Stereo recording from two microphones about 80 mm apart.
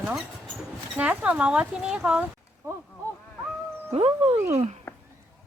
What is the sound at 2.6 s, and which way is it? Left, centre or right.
Speech, right.